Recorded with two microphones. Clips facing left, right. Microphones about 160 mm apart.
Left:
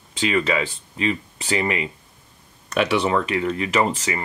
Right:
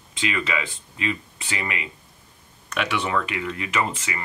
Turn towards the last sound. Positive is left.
turn(degrees=35)  # may be behind; listen again after turning